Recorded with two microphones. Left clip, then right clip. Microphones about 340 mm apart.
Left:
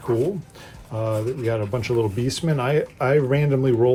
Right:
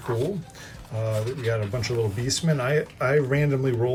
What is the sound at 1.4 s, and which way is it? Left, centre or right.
Speech, centre.